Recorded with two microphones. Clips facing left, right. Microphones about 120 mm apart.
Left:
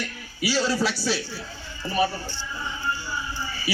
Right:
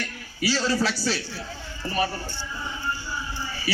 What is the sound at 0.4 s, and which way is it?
Speech, 10° left (ahead or behind).